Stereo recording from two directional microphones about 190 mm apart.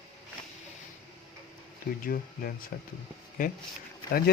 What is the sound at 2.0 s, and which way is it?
Speech, 50° left (ahead or behind).